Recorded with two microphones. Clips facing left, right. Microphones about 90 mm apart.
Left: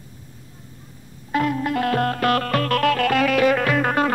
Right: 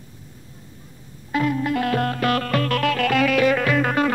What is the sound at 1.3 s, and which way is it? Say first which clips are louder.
Music: even; 50° left (ahead or behind).